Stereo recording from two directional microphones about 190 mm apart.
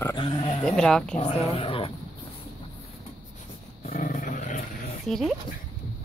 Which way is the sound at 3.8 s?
40° left (ahead or behind).